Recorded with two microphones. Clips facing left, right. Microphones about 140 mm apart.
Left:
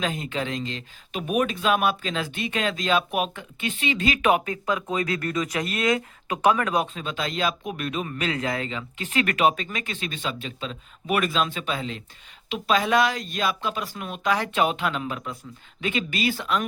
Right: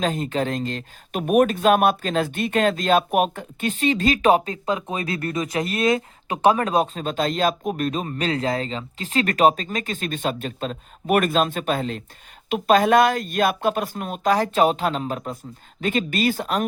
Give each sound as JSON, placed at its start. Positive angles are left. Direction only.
{"t": 0.0, "sound": "speech", "side_deg": -40}